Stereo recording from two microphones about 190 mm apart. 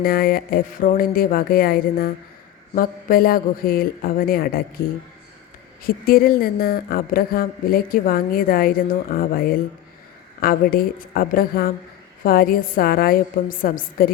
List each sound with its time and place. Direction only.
0.0 s speech: 50° left (ahead or behind)
5.8 s speech: 50° left (ahead or behind)